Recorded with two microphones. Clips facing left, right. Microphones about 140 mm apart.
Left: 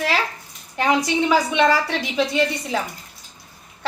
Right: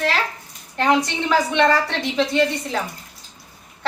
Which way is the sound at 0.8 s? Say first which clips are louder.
Even; 5° left (ahead or behind).